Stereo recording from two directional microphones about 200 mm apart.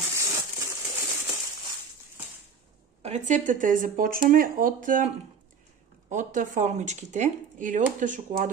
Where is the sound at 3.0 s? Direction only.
35° right (ahead or behind).